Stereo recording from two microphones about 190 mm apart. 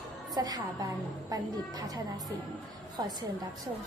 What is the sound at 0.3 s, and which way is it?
Speech, 20° right (ahead or behind).